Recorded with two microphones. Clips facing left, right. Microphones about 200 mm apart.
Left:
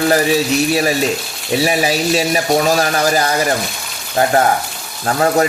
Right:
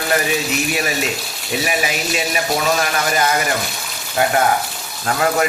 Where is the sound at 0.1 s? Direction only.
35° left (ahead or behind).